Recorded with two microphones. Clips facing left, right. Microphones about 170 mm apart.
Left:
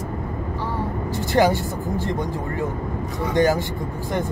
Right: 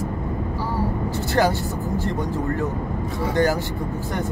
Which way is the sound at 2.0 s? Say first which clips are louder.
Right 1 dB; 15° left (ahead or behind).